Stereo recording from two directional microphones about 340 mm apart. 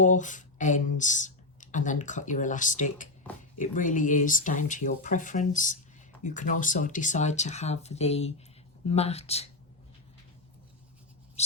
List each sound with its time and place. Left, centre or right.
0.0 s speech: left
11.4 s bird: centre